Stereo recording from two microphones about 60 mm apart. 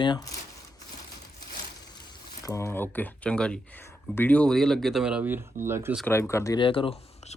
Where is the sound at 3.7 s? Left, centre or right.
Left.